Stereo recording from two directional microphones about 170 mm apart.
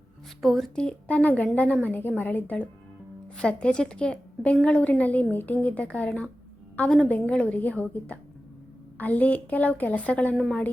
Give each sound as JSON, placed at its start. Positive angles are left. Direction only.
{"t": 0.4, "sound": "a woman's voice", "side_deg": 0}